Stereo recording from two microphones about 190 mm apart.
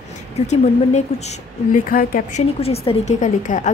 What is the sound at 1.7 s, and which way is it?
Speech, 50° left (ahead or behind).